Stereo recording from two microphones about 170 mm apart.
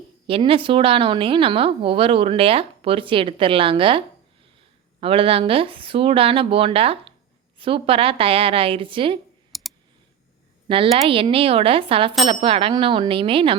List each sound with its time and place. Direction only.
0.3 s a woman's voice: 35° right (ahead or behind)
9.5 s clicking: centre (ahead or behind)
10.7 s a woman's voice: 30° right (ahead or behind)